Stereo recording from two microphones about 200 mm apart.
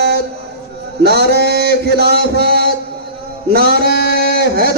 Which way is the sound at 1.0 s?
55° right (ahead or behind).